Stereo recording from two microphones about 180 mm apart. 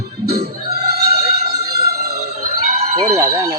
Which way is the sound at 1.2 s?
60° right (ahead or behind).